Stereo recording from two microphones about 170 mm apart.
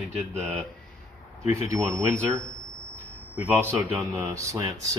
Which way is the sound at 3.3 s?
10° right (ahead or behind).